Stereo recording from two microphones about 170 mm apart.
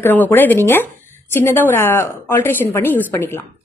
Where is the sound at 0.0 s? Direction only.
10° left (ahead or behind).